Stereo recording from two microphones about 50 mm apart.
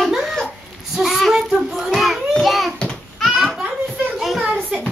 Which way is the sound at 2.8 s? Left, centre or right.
Centre.